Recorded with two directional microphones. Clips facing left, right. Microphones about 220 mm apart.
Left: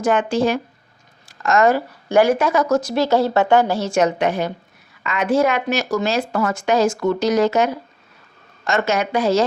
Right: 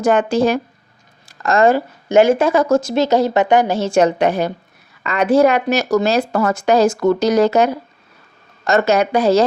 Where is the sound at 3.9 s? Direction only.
35° right (ahead or behind).